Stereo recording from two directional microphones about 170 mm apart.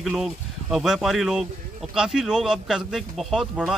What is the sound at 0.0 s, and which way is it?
A man's voice, centre (ahead or behind).